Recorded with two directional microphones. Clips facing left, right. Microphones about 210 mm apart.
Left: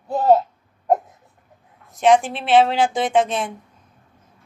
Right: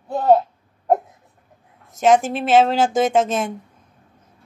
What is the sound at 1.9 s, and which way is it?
A woman's voice, 45° right (ahead or behind).